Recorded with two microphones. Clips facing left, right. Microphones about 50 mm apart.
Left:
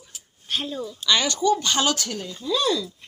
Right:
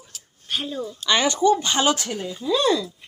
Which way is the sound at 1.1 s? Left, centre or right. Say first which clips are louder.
Right 2 dB; right.